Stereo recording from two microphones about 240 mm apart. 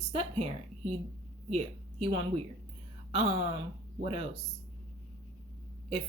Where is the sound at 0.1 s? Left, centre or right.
Right.